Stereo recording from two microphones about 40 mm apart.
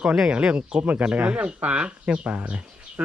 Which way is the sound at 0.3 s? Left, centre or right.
Right.